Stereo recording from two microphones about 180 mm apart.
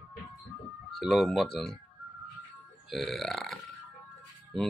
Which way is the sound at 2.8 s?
Centre (ahead or behind).